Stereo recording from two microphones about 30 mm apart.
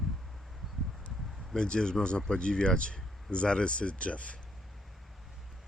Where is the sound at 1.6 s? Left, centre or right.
Left.